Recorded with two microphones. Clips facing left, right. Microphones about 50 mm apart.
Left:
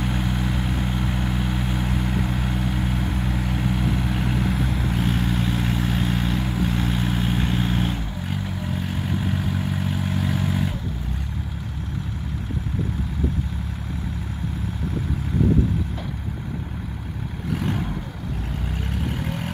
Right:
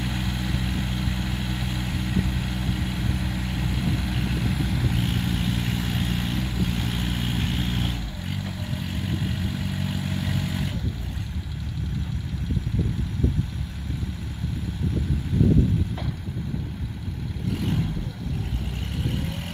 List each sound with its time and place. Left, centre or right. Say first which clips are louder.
0.0 s vehicle: left 4 dB; left